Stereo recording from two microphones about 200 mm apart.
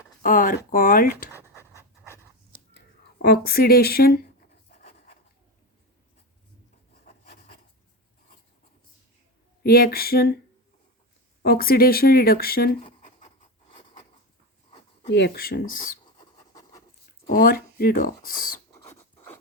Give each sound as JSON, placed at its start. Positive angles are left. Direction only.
{"t": 0.2, "sound": "speech", "side_deg": 45}
{"t": 1.3, "sound": "writing", "side_deg": -10}
{"t": 2.0, "sound": "dog", "side_deg": -10}
{"t": 2.7, "sound": "speech", "side_deg": 50}
{"t": 7.0, "sound": "rub", "side_deg": 50}
{"t": 9.6, "sound": "speech", "side_deg": 50}
{"t": 11.4, "sound": "speech", "side_deg": 50}
{"t": 12.8, "sound": "writing", "side_deg": 35}
{"t": 15.1, "sound": "speech", "side_deg": 55}
{"t": 16.1, "sound": "writing", "side_deg": 20}
{"t": 17.2, "sound": "speech", "side_deg": 45}
{"t": 18.9, "sound": "scratch", "side_deg": 10}